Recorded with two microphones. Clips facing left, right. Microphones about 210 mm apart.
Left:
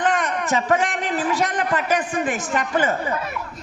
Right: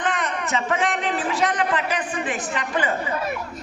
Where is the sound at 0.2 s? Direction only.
40° left (ahead or behind).